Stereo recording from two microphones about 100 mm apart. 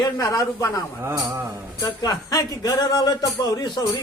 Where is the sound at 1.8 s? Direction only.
40° left (ahead or behind).